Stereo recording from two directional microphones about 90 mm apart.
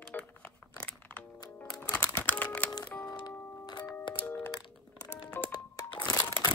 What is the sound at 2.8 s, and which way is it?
Music, 20° left (ahead or behind).